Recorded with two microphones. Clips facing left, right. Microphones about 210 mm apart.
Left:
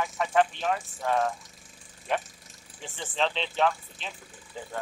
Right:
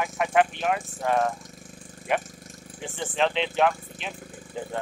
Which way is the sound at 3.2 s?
15° right (ahead or behind).